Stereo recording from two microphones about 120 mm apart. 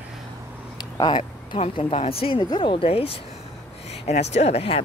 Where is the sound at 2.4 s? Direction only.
40° left (ahead or behind).